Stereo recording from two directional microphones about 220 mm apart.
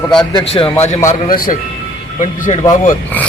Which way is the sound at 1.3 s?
40° left (ahead or behind).